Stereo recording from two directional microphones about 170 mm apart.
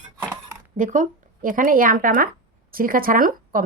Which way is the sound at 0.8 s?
50° right (ahead or behind).